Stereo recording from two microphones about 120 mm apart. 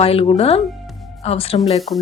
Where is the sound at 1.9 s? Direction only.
65° left (ahead or behind).